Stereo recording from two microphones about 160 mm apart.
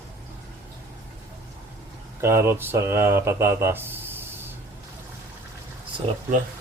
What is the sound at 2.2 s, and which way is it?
Speech, 15° right (ahead or behind).